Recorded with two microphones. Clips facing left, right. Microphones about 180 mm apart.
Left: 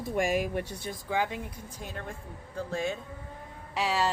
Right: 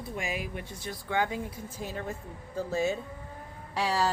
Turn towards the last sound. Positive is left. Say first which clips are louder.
# even
turn(degrees=0)  # may be behind; listen again after turning